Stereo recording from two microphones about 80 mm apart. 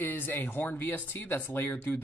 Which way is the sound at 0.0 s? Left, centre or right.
Left.